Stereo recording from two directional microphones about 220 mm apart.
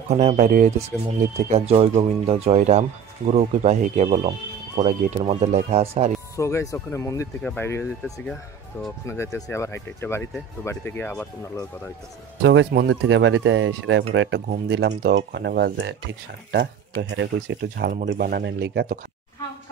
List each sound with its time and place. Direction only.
0.1 s speech: 30° right (ahead or behind)
6.3 s speech: 15° left (ahead or behind)
9.0 s speech: 10° left (ahead or behind)
12.4 s speech: 55° right (ahead or behind)